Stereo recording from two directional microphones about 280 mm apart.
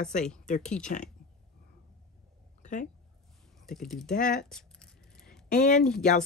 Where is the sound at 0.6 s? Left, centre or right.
Centre.